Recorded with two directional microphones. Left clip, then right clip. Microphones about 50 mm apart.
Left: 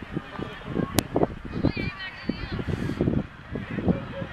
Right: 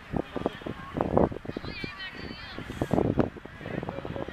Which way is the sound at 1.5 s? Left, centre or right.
Right.